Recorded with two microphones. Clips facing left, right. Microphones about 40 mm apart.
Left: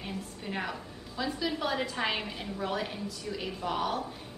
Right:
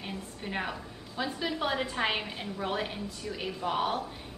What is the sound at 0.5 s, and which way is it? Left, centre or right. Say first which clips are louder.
A woman's voice: right 1 dB; centre.